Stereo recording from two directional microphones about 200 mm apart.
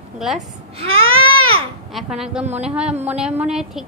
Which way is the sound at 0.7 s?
25° right (ahead or behind).